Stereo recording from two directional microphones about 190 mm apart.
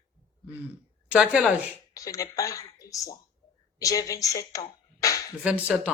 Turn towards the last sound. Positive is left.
turn(degrees=-5)  # may be behind; listen again after turning